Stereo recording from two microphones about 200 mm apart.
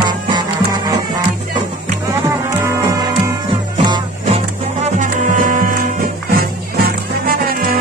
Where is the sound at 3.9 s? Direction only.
30° right (ahead or behind).